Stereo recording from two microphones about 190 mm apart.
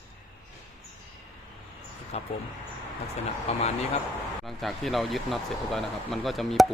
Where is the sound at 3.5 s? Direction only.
35° left (ahead or behind).